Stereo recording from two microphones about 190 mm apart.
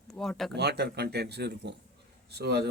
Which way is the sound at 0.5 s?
60° right (ahead or behind).